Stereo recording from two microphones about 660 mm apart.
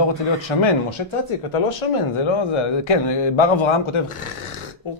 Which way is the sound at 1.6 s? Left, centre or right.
Left.